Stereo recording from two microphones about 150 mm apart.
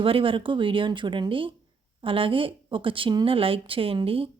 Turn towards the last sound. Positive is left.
turn(degrees=-40)  # may be behind; listen again after turning